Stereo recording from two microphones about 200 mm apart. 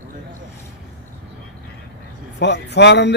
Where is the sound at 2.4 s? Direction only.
60° left (ahead or behind).